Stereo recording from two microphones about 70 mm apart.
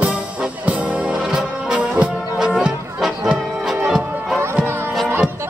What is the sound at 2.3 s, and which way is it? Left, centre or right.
Music, centre.